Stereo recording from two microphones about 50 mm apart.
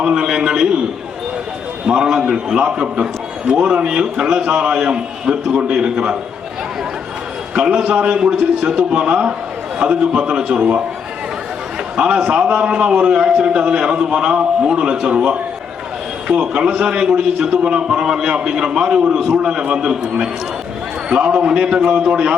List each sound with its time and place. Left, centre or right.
0.0 s a man's voice: centre
1.9 s a man's voice: centre
7.5 s a man's voice: centre
11.9 s a man's voice: centre